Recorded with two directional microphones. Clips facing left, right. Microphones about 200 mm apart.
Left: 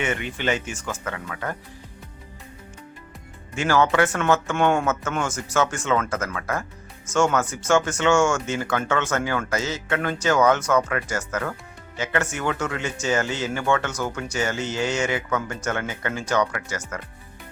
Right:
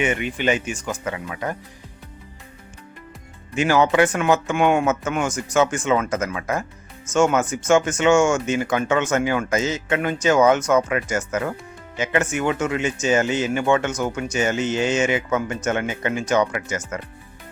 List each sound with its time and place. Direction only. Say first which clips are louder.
0.0 s speech: right 4 dB; 15° right (ahead or behind)
3.5 s speech: right 3 dB; 15° right (ahead or behind)